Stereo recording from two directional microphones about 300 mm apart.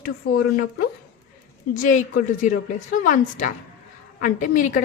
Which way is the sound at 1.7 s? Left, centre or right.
Left.